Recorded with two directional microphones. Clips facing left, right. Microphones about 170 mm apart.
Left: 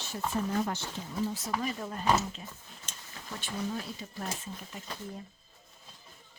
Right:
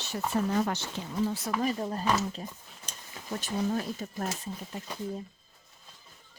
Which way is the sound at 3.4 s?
45° right (ahead or behind).